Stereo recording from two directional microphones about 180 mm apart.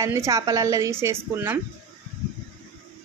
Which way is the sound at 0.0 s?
15° right (ahead or behind).